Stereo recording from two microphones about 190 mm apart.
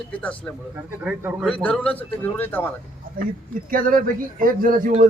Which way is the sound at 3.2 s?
50° right (ahead or behind).